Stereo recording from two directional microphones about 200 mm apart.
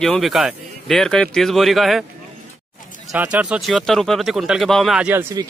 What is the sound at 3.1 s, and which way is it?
Speech, 5° right (ahead or behind).